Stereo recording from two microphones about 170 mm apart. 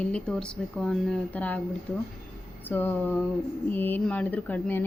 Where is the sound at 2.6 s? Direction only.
10° left (ahead or behind).